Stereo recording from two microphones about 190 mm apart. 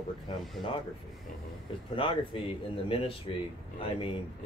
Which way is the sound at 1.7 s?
25° left (ahead or behind).